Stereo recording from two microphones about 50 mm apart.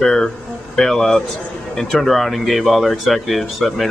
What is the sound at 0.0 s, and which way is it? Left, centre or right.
Speech, centre.